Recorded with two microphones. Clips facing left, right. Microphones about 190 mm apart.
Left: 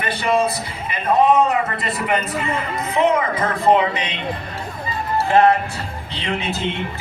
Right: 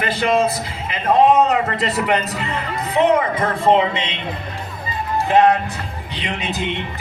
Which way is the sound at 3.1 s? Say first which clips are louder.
Right 2 dB; 30° right (ahead or behind).